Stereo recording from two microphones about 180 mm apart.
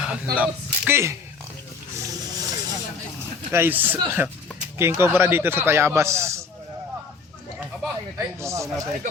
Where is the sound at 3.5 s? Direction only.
10° right (ahead or behind).